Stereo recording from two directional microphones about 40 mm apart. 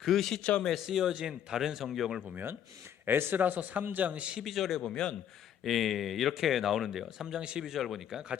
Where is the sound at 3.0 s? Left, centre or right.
Right.